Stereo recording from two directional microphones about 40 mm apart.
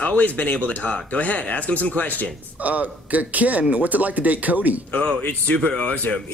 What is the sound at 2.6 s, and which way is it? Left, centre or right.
A man's voice, right.